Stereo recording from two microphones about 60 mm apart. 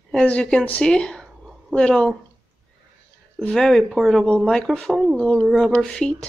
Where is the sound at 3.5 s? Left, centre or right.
Centre.